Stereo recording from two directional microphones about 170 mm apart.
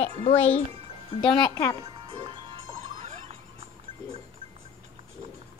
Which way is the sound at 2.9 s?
40° right (ahead or behind).